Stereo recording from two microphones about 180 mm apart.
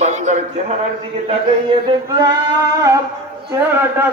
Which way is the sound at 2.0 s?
20° right (ahead or behind).